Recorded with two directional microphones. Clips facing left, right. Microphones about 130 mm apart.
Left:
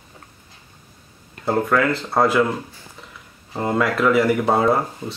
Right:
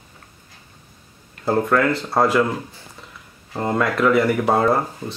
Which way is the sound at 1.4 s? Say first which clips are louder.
Right 1 dB; centre (ahead or behind).